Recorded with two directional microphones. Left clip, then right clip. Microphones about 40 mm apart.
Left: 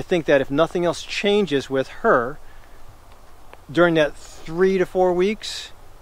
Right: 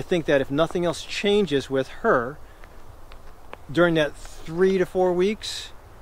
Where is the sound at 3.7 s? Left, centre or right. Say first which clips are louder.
Left 3 dB; left.